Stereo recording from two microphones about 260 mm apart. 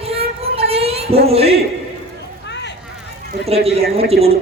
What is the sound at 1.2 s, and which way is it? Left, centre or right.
Speech, right.